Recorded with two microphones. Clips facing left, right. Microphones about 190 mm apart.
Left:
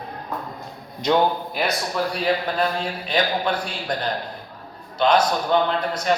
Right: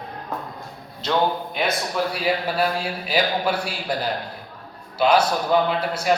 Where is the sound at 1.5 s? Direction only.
Centre (ahead or behind).